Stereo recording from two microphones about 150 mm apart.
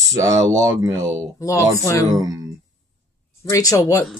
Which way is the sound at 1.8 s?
20° left (ahead or behind).